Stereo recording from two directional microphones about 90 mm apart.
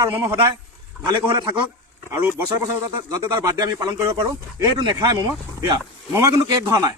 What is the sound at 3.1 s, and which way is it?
Speech, 35° right (ahead or behind).